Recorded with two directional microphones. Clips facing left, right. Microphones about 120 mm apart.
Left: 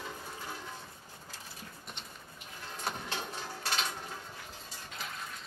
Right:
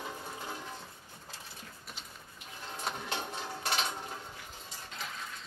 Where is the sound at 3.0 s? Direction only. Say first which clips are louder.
Right 2 dB; 20° right (ahead or behind).